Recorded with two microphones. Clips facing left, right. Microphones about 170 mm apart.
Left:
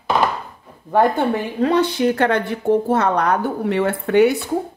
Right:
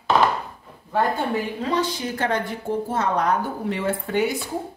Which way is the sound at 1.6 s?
60° left (ahead or behind).